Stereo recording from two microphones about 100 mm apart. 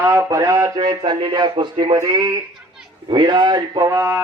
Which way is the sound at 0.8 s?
45° right (ahead or behind).